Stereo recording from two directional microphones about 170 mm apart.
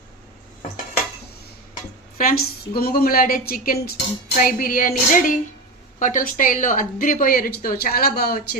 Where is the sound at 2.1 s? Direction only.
60° left (ahead or behind).